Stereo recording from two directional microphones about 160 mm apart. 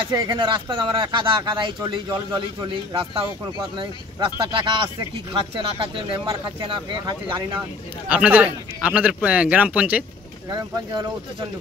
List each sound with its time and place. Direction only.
0.1 s speech: 30° right (ahead or behind)
8.1 s a man's voice: 10° right (ahead or behind)
10.5 s speech: 25° right (ahead or behind)